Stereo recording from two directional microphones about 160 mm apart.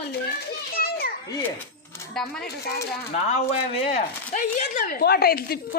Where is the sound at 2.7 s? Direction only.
80° left.